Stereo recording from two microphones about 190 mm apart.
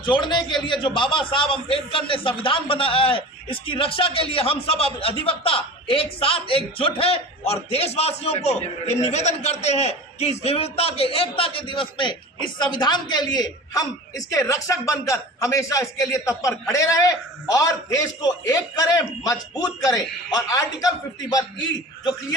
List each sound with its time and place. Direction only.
0.0 s a man's voice: 25° left (ahead or behind)